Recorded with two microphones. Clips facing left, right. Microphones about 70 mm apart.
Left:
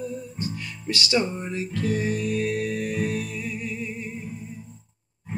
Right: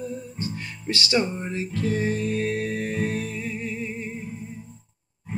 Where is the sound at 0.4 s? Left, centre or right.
Right.